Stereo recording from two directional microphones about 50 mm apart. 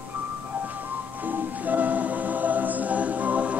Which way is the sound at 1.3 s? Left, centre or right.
Right.